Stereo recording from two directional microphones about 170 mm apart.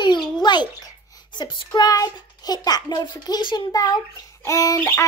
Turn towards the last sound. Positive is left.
turn(degrees=15)  # may be behind; listen again after turning